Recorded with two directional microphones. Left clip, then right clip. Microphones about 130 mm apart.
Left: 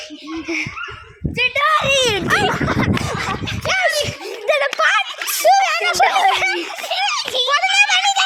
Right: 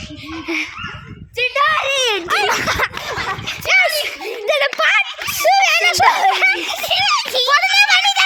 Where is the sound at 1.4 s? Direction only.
25° right (ahead or behind).